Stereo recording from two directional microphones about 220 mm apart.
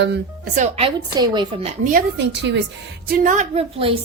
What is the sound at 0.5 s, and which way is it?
A woman's voice, 30° right (ahead or behind).